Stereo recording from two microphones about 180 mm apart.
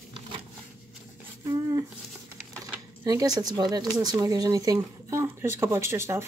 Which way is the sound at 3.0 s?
20° right (ahead or behind).